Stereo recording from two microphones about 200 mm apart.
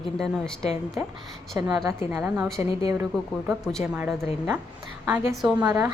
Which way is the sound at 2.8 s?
15° right (ahead or behind).